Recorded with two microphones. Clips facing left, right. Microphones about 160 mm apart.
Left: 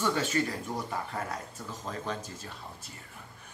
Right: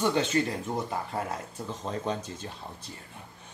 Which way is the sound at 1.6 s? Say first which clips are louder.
Right 5 dB; 25° right (ahead or behind).